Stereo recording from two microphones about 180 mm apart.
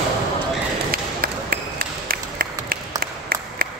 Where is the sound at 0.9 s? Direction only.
55° right (ahead or behind).